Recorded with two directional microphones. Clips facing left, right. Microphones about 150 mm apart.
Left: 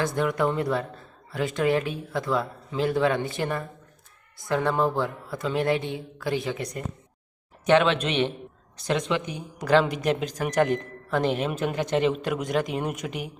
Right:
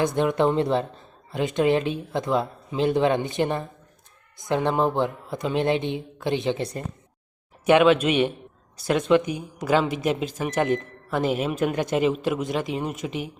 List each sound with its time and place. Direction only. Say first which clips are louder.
0.0 s speech: right 3 dB; 20° right (ahead or behind)
7.6 s speech: right 4 dB; 10° right (ahead or behind)